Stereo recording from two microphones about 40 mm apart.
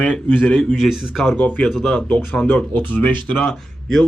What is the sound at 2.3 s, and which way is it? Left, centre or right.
Speech, left.